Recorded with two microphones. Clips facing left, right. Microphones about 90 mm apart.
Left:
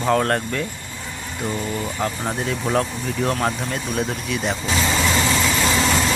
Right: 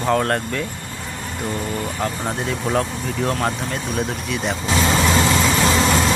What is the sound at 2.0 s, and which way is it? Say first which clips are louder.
Speech: even; centre (ahead or behind).